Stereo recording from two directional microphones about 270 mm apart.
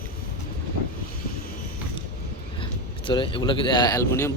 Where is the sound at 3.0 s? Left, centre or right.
Centre.